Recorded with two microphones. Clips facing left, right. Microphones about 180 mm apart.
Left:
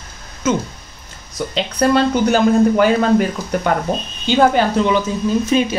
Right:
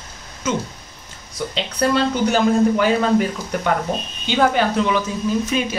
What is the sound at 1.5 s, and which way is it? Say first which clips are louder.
Speech: left 4 dB; 45° left (ahead or behind).